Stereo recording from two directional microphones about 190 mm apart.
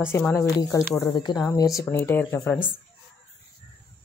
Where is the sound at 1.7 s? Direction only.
10° left (ahead or behind).